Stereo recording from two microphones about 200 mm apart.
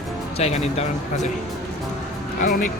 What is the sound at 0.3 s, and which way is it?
Speech, 30° left (ahead or behind).